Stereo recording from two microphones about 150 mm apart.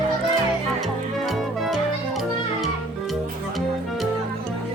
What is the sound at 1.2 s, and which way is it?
Music, centre (ahead or behind).